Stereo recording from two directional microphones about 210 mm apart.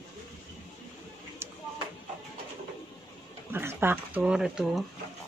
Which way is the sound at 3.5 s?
10° right (ahead or behind).